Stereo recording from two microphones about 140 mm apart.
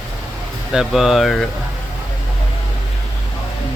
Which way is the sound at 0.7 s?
Centre (ahead or behind).